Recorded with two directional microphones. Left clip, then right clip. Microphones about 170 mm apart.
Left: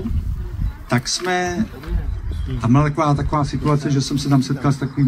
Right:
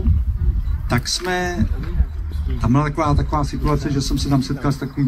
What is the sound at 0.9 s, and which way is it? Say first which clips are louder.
Speech: left 1 dB; 20° right (ahead or behind).